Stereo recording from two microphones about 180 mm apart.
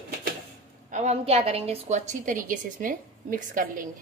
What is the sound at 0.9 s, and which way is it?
A woman's voice, 40° right (ahead or behind).